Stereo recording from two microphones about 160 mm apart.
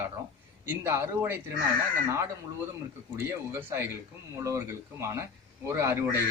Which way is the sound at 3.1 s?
15° right (ahead or behind).